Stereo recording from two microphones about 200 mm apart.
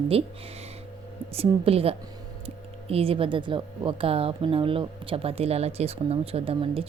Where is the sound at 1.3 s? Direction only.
30° right (ahead or behind).